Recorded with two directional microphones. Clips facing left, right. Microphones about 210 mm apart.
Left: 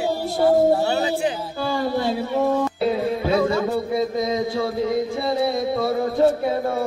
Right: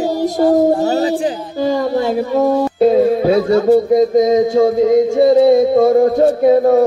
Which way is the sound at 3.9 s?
45° right (ahead or behind).